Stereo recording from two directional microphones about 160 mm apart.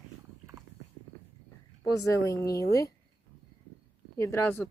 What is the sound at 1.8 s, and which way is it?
Speech, 20° left (ahead or behind).